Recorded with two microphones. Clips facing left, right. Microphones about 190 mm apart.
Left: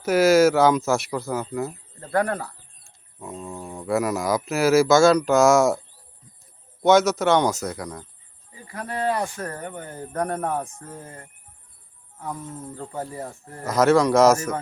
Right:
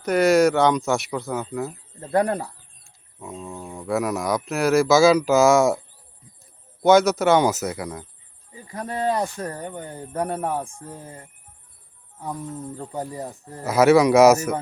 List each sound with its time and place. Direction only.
0.0 s speech: 5° left (ahead or behind)
2.0 s speech: 20° right (ahead or behind)
2.8 s speech: centre (ahead or behind)
6.8 s speech: centre (ahead or behind)
8.7 s speech: 20° right (ahead or behind)
12.8 s speech: 15° right (ahead or behind)